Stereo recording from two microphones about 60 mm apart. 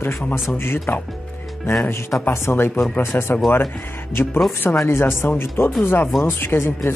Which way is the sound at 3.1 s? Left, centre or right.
Left.